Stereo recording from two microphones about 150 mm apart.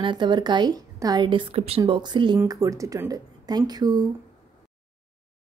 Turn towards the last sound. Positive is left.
turn(degrees=-25)  # may be behind; listen again after turning